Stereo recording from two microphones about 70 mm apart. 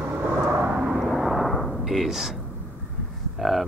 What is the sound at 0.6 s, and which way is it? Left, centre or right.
Vehicle, centre.